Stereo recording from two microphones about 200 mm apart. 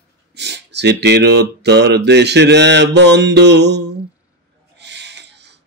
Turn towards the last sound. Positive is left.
turn(degrees=-60)  # may be behind; listen again after turning